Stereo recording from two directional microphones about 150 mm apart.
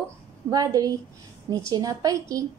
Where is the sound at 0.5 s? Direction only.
25° right (ahead or behind).